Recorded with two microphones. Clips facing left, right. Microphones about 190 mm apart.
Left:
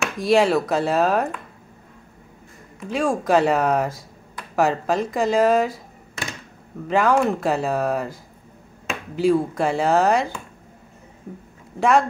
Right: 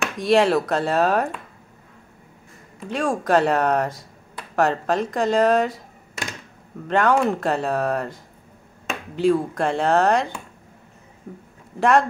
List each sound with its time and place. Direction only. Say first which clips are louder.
0.0 s speech: even; centre (ahead or behind)
2.9 s speech: left 1 dB; centre (ahead or behind)
6.9 s speech: even; centre (ahead or behind)
11.8 s speech: even; centre (ahead or behind)